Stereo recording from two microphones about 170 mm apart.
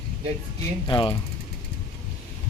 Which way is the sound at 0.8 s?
30° left (ahead or behind).